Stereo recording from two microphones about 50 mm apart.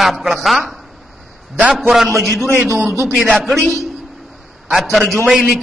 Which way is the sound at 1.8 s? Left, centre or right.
Centre.